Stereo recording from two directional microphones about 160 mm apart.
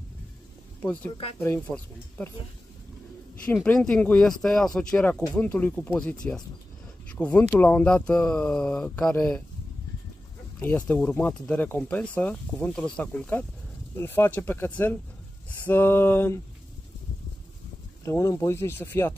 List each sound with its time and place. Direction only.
1.4 s speech: 10° left (ahead or behind)
3.6 s speech: 5° left (ahead or behind)
10.6 s speech: 10° left (ahead or behind)
18.0 s speech: 20° left (ahead or behind)